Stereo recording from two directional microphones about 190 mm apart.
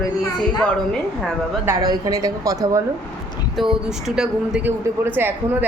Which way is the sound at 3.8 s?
5° right (ahead or behind).